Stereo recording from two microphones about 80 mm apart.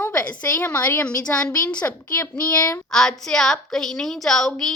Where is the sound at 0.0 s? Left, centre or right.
Left.